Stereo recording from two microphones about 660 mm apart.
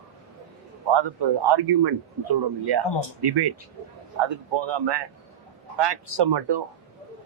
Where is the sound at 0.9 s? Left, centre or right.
Right.